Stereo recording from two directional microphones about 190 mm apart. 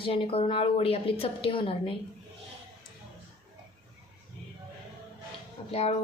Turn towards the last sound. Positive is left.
turn(degrees=35)  # may be behind; listen again after turning